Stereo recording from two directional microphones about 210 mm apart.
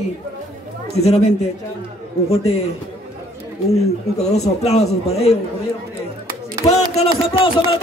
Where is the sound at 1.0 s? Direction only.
30° left (ahead or behind).